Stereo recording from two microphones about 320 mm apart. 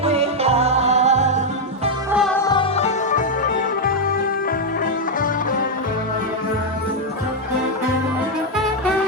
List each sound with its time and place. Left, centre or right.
0.0 s music: centre
2.1 s music: centre; by 3.2 s left